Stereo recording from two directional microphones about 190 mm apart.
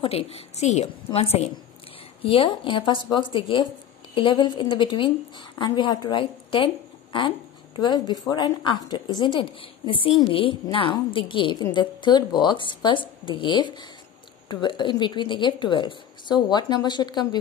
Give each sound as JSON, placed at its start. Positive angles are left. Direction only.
{"t": 0.0, "sound": "a woman's voice", "side_deg": 30}